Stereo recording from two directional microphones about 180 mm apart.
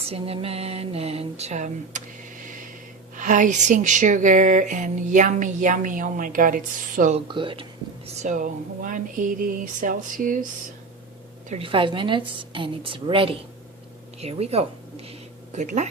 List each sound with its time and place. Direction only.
0.1 s speech: 35° right (ahead or behind)
3.2 s speech: 45° right (ahead or behind)
7.3 s speech: 30° right (ahead or behind); by 10.4 s 50° right (ahead or behind)
11.4 s a woman's voice: 35° right (ahead or behind)